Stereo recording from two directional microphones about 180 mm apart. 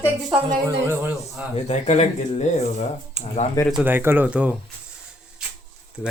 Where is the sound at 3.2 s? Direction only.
40° right (ahead or behind).